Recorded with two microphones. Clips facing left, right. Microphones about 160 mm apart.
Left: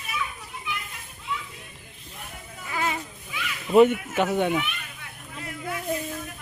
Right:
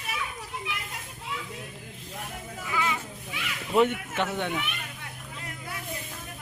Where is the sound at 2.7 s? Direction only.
40° left (ahead or behind).